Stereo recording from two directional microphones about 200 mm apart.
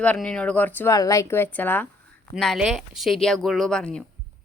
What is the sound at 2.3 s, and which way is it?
A woman's voice, centre (ahead or behind).